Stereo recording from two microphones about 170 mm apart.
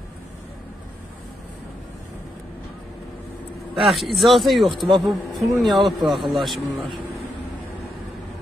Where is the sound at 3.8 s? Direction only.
Centre (ahead or behind).